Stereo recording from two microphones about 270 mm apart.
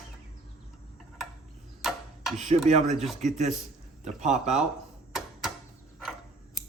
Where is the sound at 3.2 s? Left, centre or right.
Right.